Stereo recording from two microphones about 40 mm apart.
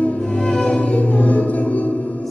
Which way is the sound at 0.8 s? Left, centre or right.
Left.